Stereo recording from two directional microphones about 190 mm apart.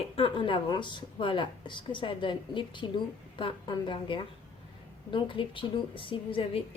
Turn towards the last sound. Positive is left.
turn(degrees=30)  # may be behind; listen again after turning